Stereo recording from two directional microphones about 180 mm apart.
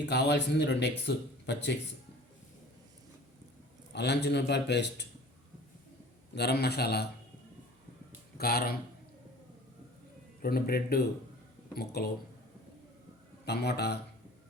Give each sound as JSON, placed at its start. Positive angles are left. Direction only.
{"t": 0.0, "sound": "speech", "side_deg": 70}
{"t": 3.9, "sound": "speech", "side_deg": 65}
{"t": 6.3, "sound": "a man's voice", "side_deg": 65}
{"t": 8.4, "sound": "a man's voice", "side_deg": 60}
{"t": 10.4, "sound": "a man's voice", "side_deg": 55}
{"t": 13.4, "sound": "a man's voice", "side_deg": 65}